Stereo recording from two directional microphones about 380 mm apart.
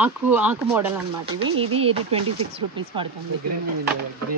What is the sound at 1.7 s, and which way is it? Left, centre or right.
Speech, centre.